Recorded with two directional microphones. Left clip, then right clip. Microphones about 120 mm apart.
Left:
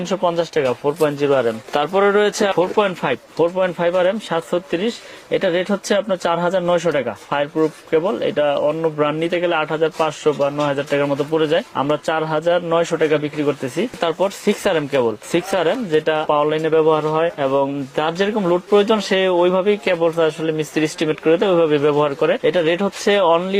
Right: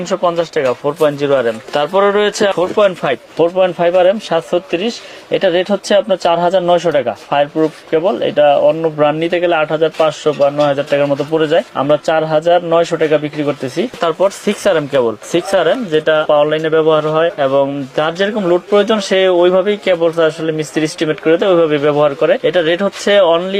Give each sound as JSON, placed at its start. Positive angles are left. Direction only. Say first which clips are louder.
{"t": 0.1, "sound": "a man's voice", "louder": "right 4 dB", "side_deg": 40}